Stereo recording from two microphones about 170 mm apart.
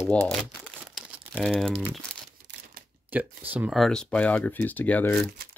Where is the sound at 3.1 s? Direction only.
10° right (ahead or behind); by 5.3 s 10° left (ahead or behind).